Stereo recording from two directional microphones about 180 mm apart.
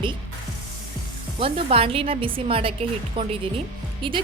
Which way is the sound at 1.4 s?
30° right (ahead or behind).